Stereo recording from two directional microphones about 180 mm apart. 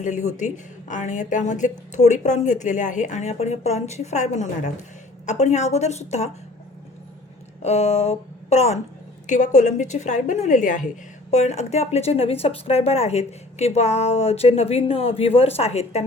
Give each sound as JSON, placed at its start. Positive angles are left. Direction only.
{"t": 0.0, "sound": "speech", "side_deg": 40}
{"t": 7.6, "sound": "a woman's voice", "side_deg": 35}